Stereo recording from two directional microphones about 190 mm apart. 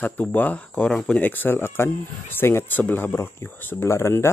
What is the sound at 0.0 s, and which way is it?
Speech, 10° left (ahead or behind).